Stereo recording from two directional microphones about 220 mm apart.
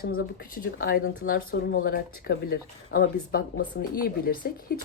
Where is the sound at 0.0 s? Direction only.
40° left (ahead or behind).